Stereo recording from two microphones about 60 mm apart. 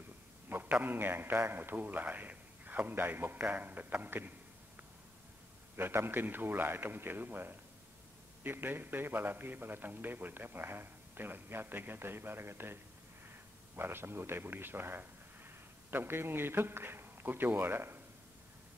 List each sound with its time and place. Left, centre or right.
0.5 s a sound: right
0.7 s a man's voice: right
5.8 s a man's voice: right
13.7 s a man's voice: right